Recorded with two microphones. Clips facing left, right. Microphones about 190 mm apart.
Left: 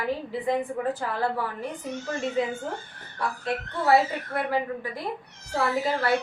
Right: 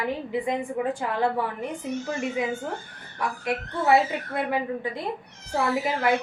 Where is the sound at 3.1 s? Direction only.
15° right (ahead or behind).